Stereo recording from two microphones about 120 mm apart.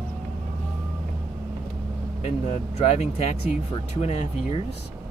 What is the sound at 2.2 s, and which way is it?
Speech, 70° left (ahead or behind).